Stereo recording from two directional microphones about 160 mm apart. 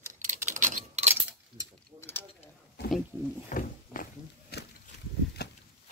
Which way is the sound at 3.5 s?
55° left (ahead or behind).